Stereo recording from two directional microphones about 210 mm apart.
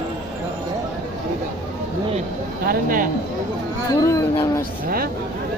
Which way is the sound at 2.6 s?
40° right (ahead or behind).